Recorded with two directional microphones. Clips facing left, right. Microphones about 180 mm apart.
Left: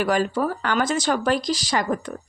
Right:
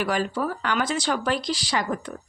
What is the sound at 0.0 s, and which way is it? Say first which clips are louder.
Speech: left 4 dB; 45° left (ahead or behind).